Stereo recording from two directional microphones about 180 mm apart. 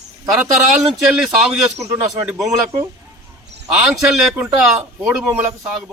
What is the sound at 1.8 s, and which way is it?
Speech, 15° right (ahead or behind).